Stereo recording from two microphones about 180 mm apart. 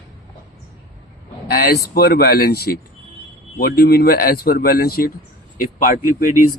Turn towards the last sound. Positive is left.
turn(degrees=50)  # may be behind; listen again after turning